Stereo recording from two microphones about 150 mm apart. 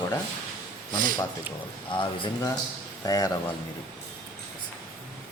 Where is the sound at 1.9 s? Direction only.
30° left (ahead or behind).